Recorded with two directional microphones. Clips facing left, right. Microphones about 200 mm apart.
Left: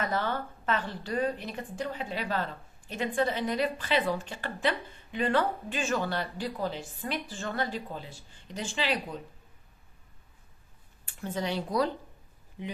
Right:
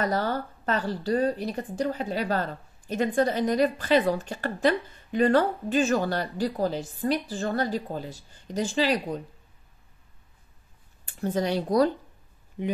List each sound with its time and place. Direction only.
0.0 s speech: 40° right (ahead or behind)
11.1 s speech: 40° right (ahead or behind)